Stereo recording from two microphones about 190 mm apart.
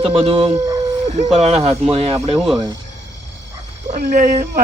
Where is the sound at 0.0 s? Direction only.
30° right (ahead or behind).